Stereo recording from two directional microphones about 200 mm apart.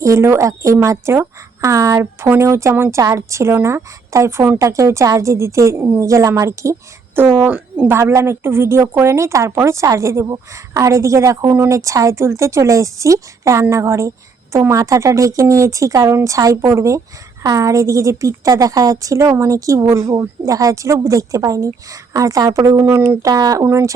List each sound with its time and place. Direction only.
0.0 s speech: 15° right (ahead or behind)